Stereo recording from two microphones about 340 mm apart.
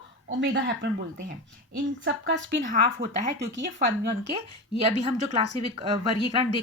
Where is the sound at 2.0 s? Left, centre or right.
Right.